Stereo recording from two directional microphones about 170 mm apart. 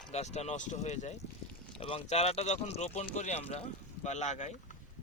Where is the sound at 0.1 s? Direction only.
40° left (ahead or behind).